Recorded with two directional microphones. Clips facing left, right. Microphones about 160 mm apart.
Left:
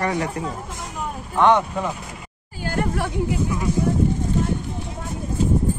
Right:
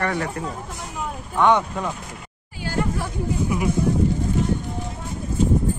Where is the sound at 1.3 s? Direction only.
10° left (ahead or behind).